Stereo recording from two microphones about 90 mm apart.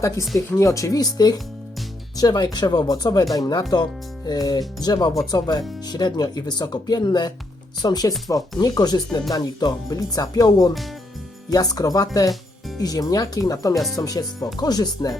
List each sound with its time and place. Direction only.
0.0 s speech: 35° left (ahead or behind)
13.7 s speech: centre (ahead or behind)
14.0 s speech: 45° left (ahead or behind)